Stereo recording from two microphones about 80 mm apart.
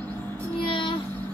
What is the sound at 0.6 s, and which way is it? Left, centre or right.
Child singing, left.